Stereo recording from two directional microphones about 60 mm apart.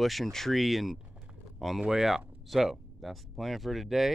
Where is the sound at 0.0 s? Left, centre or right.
Centre.